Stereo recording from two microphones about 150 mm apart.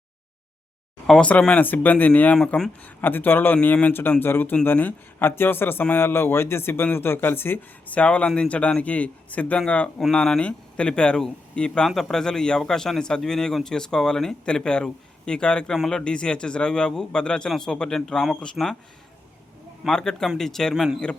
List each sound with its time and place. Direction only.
1.0 s speech: 5° left (ahead or behind)
19.8 s a man's voice: 5° left (ahead or behind)